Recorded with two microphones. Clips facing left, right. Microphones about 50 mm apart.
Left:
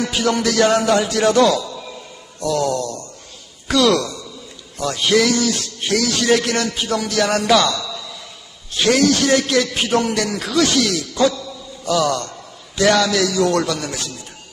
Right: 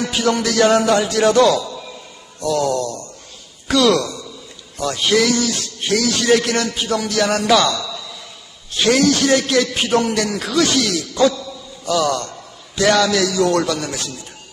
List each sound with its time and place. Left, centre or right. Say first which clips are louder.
0.0 s music: even; centre
3.7 s a sound: right 1 dB; centre
5.0 s music: left 1 dB; centre
6.4 s rapping: right 1 dB; right
6.7 s music: right 1 dB; centre
7.3 s a man's voice: even; centre
8.8 s music: even; centre
9.4 s a sound: right 1 dB; centre
10.2 s a man's voice: even; centre
12.3 s a sound: even; centre
13.0 s music: right 1 dB; centre
13.5 s rapping: right 1 dB; right
13.7 s music: right 1 dB; centre